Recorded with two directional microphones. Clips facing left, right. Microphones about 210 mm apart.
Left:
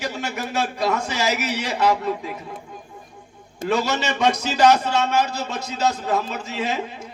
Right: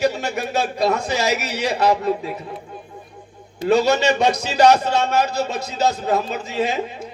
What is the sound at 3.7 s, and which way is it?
A man's voice, 35° right (ahead or behind).